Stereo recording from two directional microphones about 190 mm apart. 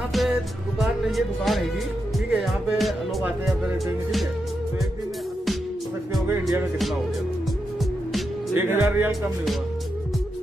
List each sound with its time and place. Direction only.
0.1 s music: centre (ahead or behind)
2.1 s speech: centre (ahead or behind)
8.5 s speech: 15° right (ahead or behind)